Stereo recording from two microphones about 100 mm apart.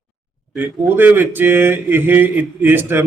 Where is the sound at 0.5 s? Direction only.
20° right (ahead or behind).